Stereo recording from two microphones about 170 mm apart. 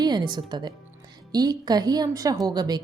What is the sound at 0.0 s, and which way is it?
A woman's voice, 25° right (ahead or behind).